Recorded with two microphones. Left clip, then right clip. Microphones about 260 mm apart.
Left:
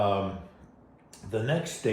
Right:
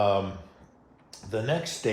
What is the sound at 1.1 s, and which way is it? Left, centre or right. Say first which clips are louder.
Speech: right 1 dB; right.